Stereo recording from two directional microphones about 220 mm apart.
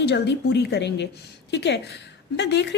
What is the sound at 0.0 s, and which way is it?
A woman's voice, 50° left (ahead or behind).